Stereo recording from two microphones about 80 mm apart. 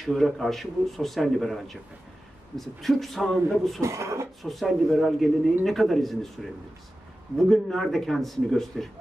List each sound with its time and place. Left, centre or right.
0.0 s a man's voice: centre
3.8 s speech: right
4.4 s a man's voice: centre